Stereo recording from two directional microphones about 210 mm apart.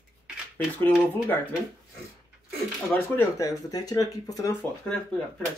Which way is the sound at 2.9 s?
15° left (ahead or behind).